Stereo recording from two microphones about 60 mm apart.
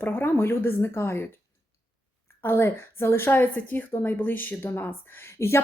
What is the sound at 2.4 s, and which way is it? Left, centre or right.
Speech, left.